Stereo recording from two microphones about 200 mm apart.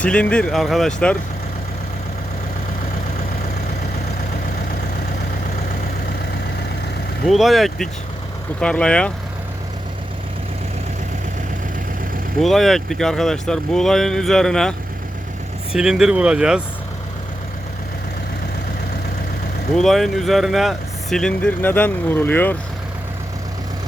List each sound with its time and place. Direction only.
0.0 s speech: 5° left (ahead or behind)
7.3 s speech: centre (ahead or behind)
12.4 s speech: centre (ahead or behind)
19.7 s speech: centre (ahead or behind)